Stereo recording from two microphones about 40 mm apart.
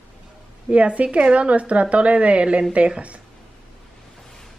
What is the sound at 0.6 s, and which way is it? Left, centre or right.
A woman's voice, right.